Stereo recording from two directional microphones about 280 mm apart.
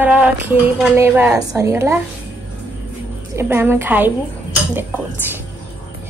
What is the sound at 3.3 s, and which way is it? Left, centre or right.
Speech, centre.